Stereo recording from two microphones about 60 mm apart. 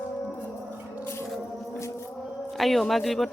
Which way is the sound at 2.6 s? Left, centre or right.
Centre.